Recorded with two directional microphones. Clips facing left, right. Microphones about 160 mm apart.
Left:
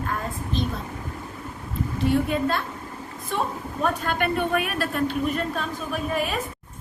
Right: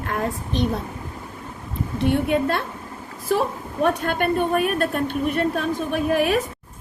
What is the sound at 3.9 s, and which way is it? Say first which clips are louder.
A woman's voice: right 3 dB; 55° right (ahead or behind).